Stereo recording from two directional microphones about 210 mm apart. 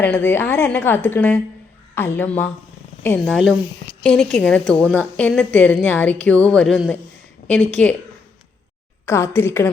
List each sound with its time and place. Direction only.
0.0 s a woman's voice: 10° left (ahead or behind)
9.0 s a woman's voice: 10° left (ahead or behind)